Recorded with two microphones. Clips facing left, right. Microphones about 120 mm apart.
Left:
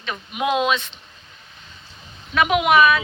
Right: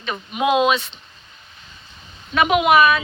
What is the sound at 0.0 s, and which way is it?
Speech, 5° right (ahead or behind).